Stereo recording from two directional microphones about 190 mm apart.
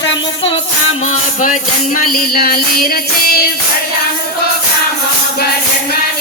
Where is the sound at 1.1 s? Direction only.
45° left (ahead or behind).